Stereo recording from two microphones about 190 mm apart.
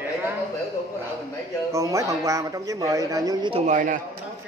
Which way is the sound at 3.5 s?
40° right (ahead or behind).